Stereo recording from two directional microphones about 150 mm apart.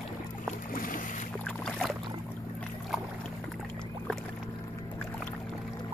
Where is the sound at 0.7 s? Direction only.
65° left (ahead or behind).